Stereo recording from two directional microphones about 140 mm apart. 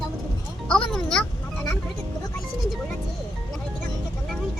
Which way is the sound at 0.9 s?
5° left (ahead or behind).